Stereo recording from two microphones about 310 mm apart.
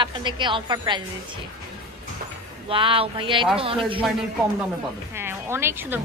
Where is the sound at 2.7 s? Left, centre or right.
Centre.